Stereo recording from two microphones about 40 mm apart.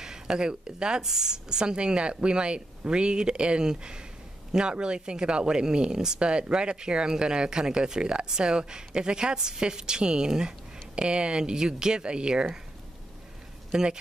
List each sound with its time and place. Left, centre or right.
0.0 s speech: centre
13.7 s speech: centre